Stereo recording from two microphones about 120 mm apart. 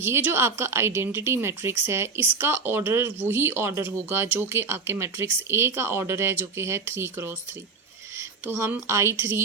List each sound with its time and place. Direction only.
0.0 s speech: 20° right (ahead or behind)